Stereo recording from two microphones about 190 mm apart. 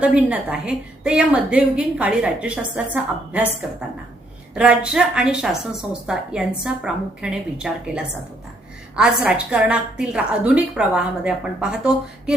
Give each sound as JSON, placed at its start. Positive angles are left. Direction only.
{"t": 0.2, "sound": "a woman's voice", "side_deg": -5}
{"t": 4.5, "sound": "a woman's voice", "side_deg": -5}